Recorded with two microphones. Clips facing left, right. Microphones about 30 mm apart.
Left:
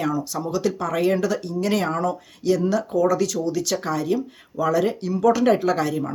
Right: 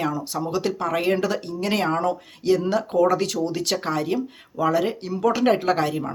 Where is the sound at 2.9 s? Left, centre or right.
Right.